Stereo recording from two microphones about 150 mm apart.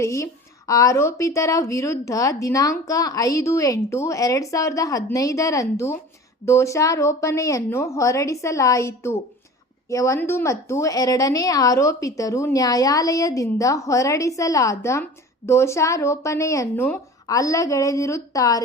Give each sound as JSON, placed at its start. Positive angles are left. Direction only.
{"t": 0.0, "sound": "a woman's voice", "side_deg": 20}